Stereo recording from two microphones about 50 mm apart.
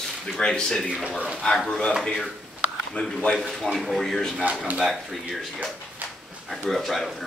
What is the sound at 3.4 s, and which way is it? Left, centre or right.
Speech, centre.